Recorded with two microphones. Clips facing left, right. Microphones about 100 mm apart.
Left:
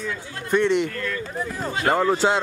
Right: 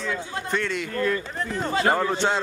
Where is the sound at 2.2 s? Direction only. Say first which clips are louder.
Left 3 dB; 10° left (ahead or behind).